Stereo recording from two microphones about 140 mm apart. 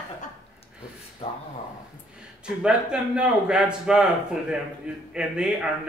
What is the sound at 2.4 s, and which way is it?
A man's voice, 5° right (ahead or behind).